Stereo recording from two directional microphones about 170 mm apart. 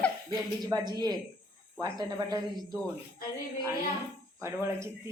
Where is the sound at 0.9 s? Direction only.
25° right (ahead or behind).